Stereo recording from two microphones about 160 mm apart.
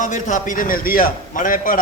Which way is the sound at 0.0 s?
50° left (ahead or behind).